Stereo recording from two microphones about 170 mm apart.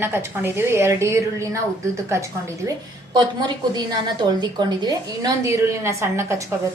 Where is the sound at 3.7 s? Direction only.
25° right (ahead or behind).